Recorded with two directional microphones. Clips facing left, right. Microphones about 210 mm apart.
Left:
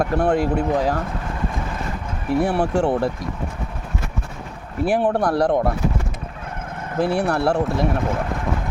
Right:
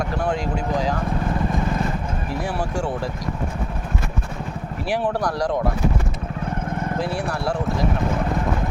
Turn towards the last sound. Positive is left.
turn(degrees=65)  # may be behind; listen again after turning